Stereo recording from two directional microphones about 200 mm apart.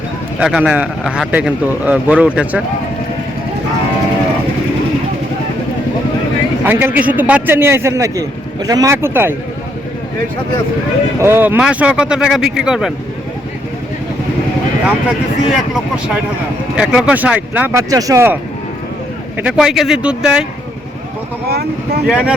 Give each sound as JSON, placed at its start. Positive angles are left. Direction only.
{"t": 0.3, "sound": "a man's voice", "side_deg": -5}
{"t": 6.7, "sound": "a man's voice", "side_deg": -10}
{"t": 11.2, "sound": "speech", "side_deg": -10}
{"t": 14.8, "sound": "a man's voice", "side_deg": -5}
{"t": 19.4, "sound": "speech", "side_deg": -5}
{"t": 21.5, "sound": "speech", "side_deg": -55}
{"t": 22.0, "sound": "speech", "side_deg": -5}